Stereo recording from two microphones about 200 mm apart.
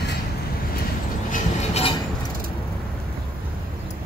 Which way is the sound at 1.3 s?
30° left (ahead or behind).